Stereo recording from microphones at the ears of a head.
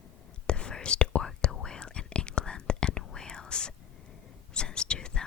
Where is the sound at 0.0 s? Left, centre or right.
Left.